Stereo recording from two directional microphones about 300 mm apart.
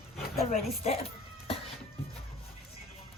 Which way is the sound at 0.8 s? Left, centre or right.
Centre.